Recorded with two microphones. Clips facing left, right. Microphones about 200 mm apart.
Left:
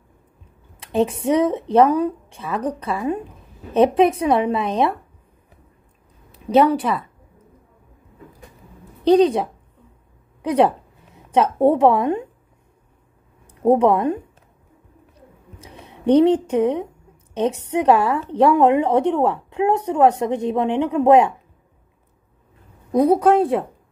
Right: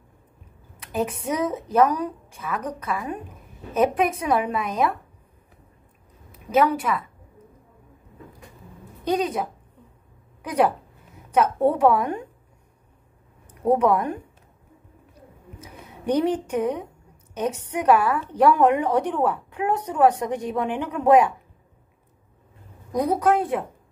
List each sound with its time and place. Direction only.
0.7 s a woman's voice: 30° left (ahead or behind)
6.4 s a woman's voice: 30° left (ahead or behind)
9.0 s a woman's voice: 30° left (ahead or behind)
13.6 s a woman's voice: 25° left (ahead or behind)
15.6 s a woman's voice: 25° left (ahead or behind)
22.8 s a woman's voice: 30° left (ahead or behind)